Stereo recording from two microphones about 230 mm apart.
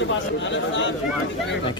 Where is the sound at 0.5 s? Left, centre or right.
Left.